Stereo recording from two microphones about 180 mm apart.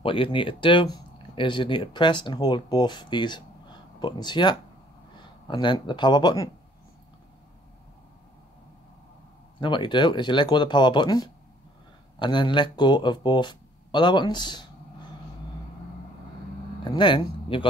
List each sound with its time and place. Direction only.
0.0 s speech: 30° left (ahead or behind)
9.6 s speech: 25° left (ahead or behind)
16.8 s speech: 25° left (ahead or behind)